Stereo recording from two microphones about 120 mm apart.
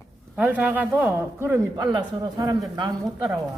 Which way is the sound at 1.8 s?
30° right (ahead or behind).